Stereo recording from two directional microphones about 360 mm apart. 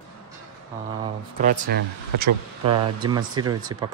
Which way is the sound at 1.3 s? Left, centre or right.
Right.